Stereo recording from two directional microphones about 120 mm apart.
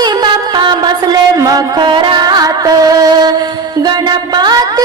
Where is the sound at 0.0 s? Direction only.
35° right (ahead or behind).